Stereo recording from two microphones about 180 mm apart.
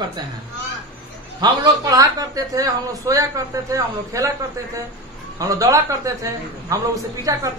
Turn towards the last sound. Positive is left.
turn(degrees=-20)  # may be behind; listen again after turning